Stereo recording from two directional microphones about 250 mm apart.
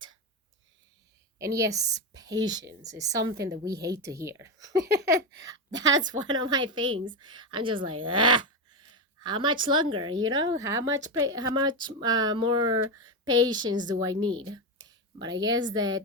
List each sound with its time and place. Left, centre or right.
1.4 s speech: centre